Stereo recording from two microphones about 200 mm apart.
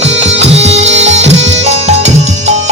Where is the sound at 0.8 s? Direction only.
65° right (ahead or behind).